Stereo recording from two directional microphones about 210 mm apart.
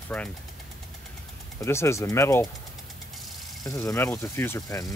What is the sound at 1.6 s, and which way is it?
Speech, 15° left (ahead or behind).